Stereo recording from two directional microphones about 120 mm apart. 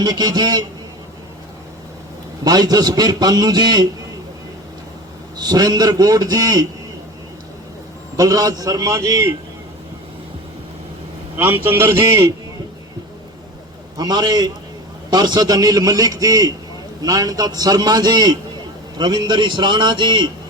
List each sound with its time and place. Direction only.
0.0 s a man's voice: 35° right (ahead or behind)
2.4 s a man's voice: 35° right (ahead or behind)
5.4 s a man's voice: 35° right (ahead or behind)
8.1 s a man's voice: 30° right (ahead or behind)
11.3 s a man's voice: 15° right (ahead or behind)
13.9 s a man's voice: 35° right (ahead or behind)